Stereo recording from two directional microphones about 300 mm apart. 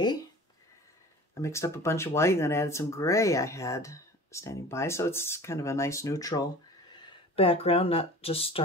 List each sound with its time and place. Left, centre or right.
1.3 s speech: centre